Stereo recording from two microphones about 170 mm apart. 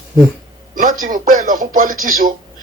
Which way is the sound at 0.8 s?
50° right (ahead or behind).